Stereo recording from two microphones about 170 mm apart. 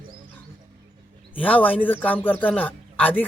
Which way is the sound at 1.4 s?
10° left (ahead or behind).